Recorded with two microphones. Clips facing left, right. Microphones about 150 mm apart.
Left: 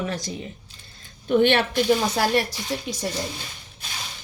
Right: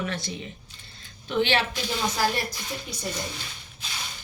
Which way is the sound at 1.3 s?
55° left (ahead or behind).